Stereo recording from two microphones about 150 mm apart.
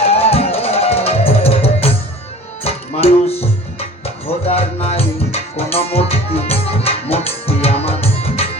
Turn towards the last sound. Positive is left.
turn(degrees=40)  # may be behind; listen again after turning